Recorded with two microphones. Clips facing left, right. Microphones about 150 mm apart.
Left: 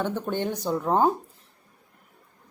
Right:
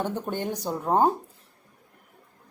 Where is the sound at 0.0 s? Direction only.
10° right (ahead or behind).